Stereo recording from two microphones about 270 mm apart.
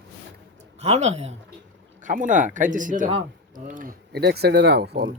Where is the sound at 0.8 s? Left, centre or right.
Right.